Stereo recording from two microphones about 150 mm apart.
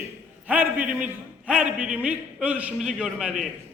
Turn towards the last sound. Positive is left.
turn(degrees=0)  # may be behind; listen again after turning